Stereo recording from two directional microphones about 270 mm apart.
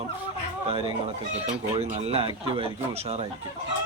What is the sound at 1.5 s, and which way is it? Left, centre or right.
Chicken, right.